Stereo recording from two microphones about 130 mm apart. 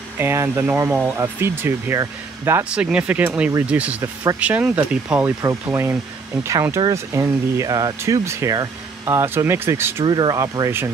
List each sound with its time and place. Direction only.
0.2 s speech: 20° right (ahead or behind)
4.0 s speech: 25° right (ahead or behind)
4.4 s speech: 10° right (ahead or behind)
10.0 s speech: 35° right (ahead or behind)